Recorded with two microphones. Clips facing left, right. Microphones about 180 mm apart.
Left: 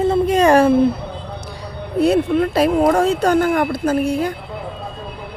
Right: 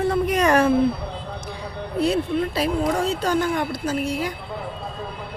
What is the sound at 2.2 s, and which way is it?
Speech, 75° left (ahead or behind).